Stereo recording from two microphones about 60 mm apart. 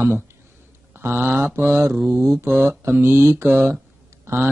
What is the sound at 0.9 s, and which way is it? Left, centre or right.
Speech, right.